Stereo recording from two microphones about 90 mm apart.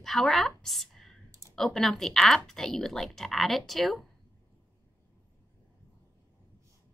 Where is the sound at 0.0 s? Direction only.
5° left (ahead or behind).